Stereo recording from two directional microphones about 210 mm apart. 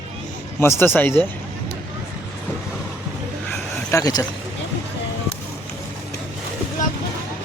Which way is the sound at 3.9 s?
15° left (ahead or behind).